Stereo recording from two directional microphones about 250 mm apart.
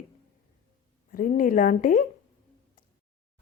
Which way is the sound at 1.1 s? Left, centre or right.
Left.